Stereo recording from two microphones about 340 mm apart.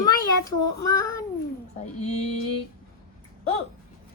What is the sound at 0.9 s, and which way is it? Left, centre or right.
Child singing, centre.